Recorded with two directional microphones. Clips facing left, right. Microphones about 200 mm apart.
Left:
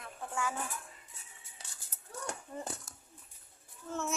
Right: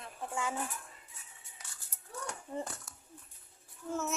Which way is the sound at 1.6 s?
30° left (ahead or behind).